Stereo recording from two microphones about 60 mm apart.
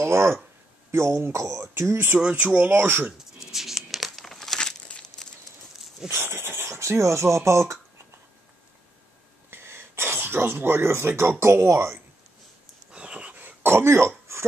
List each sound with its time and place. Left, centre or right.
0.0 s speech: right
2.1 s speech: right
2.7 s speech: right
3.3 s crumpling: centre
6.0 s speech: right
9.5 s speech: right
12.9 s wheeze: centre
13.6 s throat clearing: right